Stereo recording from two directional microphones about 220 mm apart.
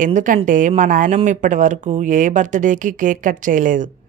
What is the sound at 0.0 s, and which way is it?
Speech, 35° right (ahead or behind).